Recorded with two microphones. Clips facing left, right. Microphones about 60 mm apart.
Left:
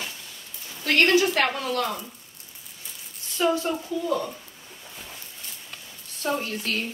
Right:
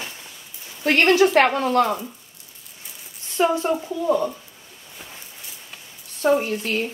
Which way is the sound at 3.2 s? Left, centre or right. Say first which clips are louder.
Right 4 dB; right.